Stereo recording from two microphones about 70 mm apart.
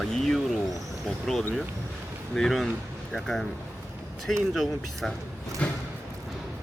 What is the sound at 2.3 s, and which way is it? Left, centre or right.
Speech, centre.